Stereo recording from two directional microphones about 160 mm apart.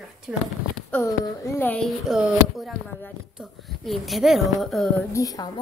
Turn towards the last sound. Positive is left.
turn(degrees=20)  # may be behind; listen again after turning